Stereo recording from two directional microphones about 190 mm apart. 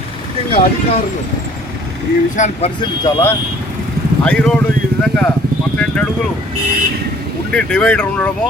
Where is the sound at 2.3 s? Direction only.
40° left (ahead or behind).